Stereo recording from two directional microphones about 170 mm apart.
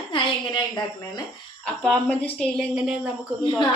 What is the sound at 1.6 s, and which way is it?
A woman's voice, 5° left (ahead or behind).